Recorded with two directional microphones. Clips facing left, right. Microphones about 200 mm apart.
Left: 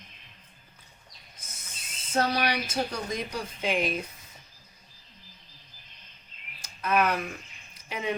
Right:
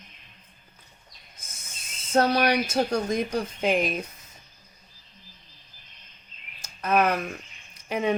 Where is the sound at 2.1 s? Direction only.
50° right (ahead or behind).